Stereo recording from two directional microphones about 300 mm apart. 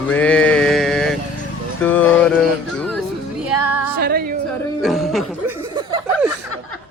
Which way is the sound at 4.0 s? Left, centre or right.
Right.